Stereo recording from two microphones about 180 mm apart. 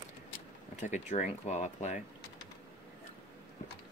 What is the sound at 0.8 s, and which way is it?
Speech, 40° left (ahead or behind).